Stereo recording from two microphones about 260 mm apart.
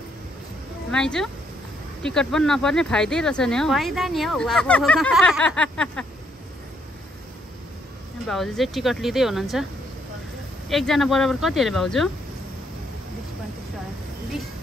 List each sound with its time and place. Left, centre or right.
0.9 s speech: centre
8.3 s speech: centre
10.7 s speech: centre